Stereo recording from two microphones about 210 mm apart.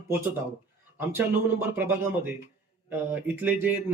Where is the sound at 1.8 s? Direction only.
10° right (ahead or behind).